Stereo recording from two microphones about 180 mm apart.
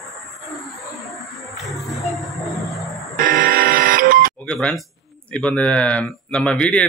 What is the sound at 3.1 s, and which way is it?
Buzzer, 45° right (ahead or behind).